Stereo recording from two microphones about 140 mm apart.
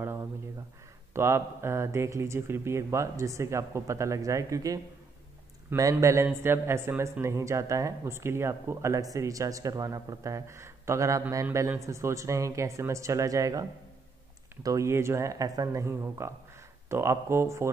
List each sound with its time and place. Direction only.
1.1 s a man's voice: 20° right (ahead or behind)
5.8 s a man's voice: 25° right (ahead or behind)